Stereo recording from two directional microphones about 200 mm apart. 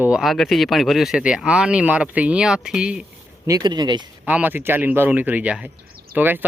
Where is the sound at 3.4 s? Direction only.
20° right (ahead or behind).